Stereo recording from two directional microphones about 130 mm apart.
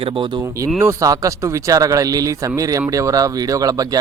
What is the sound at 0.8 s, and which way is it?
Speech, 25° right (ahead or behind).